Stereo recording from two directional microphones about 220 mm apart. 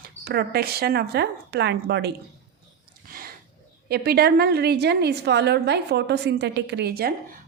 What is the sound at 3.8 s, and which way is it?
A woman's voice, 45° right (ahead or behind).